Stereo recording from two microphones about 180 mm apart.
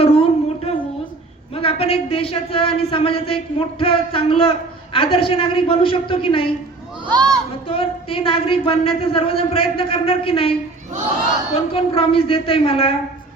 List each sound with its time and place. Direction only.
0.0 s a sound: 35° left (ahead or behind)
1.5 s a man's voice: 30° left (ahead or behind)
7.1 s speech: 20° right (ahead or behind)
7.7 s speech: 30° left (ahead or behind)
11.7 s speech: 30° left (ahead or behind)